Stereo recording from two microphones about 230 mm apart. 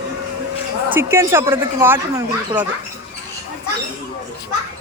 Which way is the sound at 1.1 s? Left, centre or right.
Centre.